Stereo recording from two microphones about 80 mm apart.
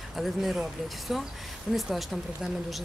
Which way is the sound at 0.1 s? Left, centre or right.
Centre.